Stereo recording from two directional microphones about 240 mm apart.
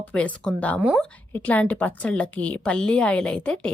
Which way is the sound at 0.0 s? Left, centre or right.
Centre.